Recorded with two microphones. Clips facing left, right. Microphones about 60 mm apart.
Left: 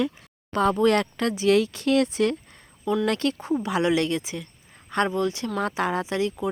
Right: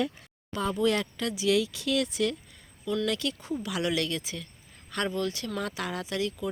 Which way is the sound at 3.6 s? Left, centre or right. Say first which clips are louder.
Left 6 dB; left.